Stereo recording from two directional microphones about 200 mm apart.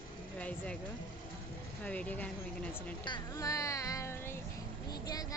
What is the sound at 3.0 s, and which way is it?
Speech, 20° left (ahead or behind).